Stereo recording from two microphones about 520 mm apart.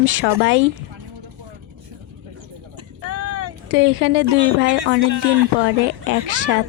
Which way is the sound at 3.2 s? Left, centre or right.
Right.